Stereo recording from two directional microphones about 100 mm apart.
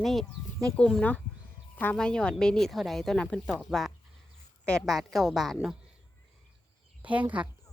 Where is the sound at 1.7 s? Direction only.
15° left (ahead or behind).